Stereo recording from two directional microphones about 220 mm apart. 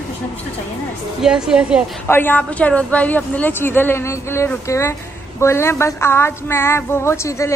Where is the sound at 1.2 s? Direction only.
5° right (ahead or behind).